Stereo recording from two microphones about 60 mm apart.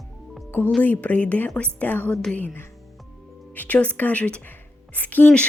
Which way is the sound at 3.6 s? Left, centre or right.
Left.